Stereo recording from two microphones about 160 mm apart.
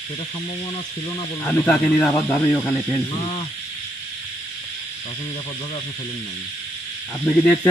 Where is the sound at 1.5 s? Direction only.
10° left (ahead or behind).